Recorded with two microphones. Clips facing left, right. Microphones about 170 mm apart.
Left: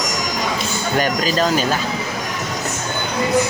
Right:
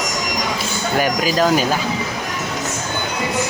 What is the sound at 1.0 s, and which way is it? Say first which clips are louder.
Speech: right 1 dB; 10° right (ahead or behind).